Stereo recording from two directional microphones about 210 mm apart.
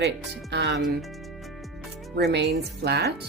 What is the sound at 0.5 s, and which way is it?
Speech, 55° right (ahead or behind).